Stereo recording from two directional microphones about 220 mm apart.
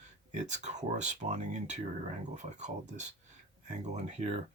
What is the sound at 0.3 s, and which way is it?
Speech, 30° right (ahead or behind).